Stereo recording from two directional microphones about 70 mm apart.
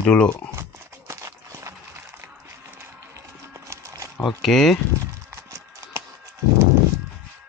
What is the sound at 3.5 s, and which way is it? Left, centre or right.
Horse, right.